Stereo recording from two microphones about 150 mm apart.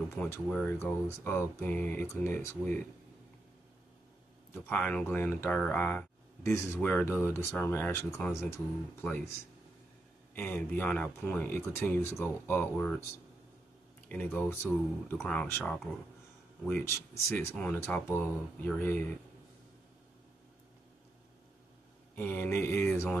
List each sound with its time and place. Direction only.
0.1 s speech: 20° left (ahead or behind)
4.6 s speech: 10° left (ahead or behind)
10.3 s speech: 10° left (ahead or behind)
14.0 s speech: 10° left (ahead or behind)
22.1 s speech: 15° left (ahead or behind)